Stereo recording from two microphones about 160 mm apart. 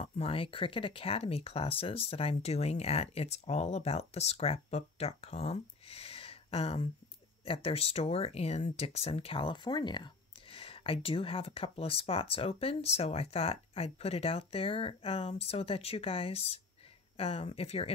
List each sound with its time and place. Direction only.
0.0 s speech: 40° left (ahead or behind)